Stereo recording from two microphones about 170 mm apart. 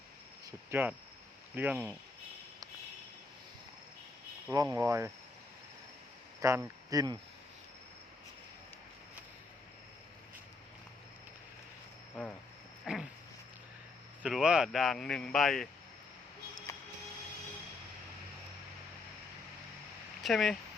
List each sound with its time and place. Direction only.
0.4 s speech: 10° right (ahead or behind)
4.5 s speech: 20° right (ahead or behind)
6.4 s speech: 15° right (ahead or behind)
12.8 s a sound: centre (ahead or behind)
14.2 s speech: 5° right (ahead or behind)
20.2 s speech: centre (ahead or behind)